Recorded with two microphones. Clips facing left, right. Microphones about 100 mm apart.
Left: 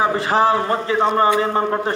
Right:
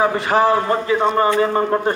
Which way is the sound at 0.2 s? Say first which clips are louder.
Right 1 dB; 30° left (ahead or behind).